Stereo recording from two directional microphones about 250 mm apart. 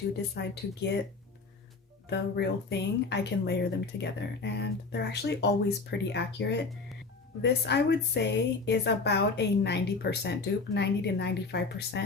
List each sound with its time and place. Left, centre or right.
0.3 s speech: left
2.0 s a woman's voice: left